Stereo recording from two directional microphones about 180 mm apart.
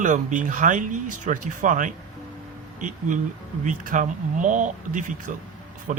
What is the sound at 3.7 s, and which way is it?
Speech, 45° right (ahead or behind).